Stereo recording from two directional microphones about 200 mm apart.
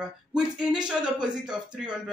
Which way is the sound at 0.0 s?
5° right (ahead or behind).